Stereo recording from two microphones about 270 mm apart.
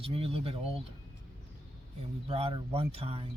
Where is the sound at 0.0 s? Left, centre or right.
Right.